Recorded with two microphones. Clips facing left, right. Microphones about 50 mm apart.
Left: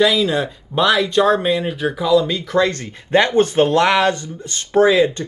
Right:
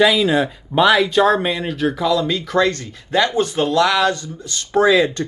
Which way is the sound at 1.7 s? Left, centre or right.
Centre.